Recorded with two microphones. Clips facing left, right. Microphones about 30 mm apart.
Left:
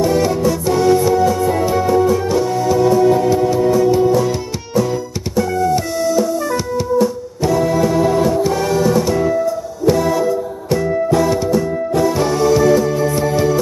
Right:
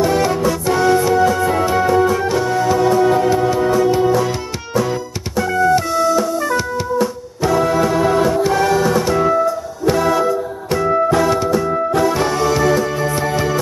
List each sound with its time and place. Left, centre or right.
0.0 s music: right
5.9 s music: right